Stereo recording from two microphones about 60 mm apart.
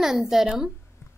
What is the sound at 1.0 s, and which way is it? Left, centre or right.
Music, left.